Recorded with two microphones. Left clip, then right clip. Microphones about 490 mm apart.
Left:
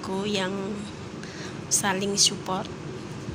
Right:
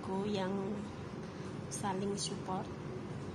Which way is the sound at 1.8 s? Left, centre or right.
Right.